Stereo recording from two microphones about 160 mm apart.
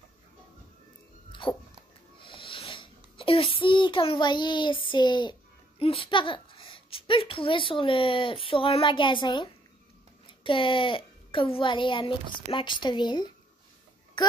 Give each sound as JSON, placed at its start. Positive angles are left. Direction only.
{"t": 1.3, "sound": "dog", "side_deg": 30}
{"t": 2.1, "sound": "a sound", "side_deg": 30}
{"t": 5.8, "sound": "a child's voice", "side_deg": 35}